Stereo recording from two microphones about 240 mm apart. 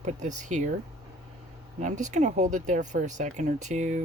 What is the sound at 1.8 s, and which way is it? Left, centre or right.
Speech, right.